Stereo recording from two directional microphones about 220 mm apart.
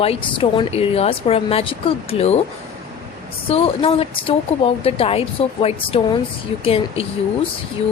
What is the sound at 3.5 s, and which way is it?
A woman's voice, 25° left (ahead or behind).